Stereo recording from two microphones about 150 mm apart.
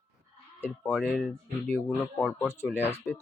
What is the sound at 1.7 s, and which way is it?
Speech, 10° left (ahead or behind).